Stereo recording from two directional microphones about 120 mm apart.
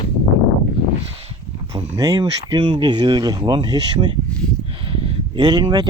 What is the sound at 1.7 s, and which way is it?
Speech, 35° right (ahead or behind).